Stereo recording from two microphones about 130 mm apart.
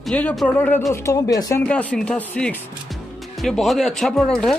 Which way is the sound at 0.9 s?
20° left (ahead or behind).